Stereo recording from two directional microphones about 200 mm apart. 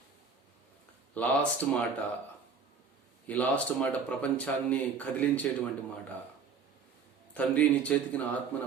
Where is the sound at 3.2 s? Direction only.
5° left (ahead or behind).